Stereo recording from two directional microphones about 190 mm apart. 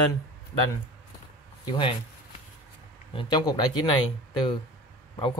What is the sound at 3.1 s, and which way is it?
Speech, 25° left (ahead or behind).